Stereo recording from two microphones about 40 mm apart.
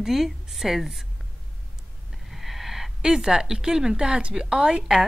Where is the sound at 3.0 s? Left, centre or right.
Centre.